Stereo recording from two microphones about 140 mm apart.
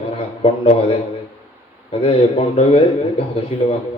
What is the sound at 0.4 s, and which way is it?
A man's voice, 45° left (ahead or behind).